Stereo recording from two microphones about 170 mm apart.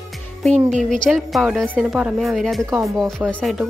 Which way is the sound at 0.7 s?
5° left (ahead or behind).